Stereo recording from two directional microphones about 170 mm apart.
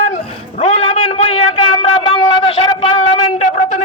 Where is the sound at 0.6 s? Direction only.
35° left (ahead or behind).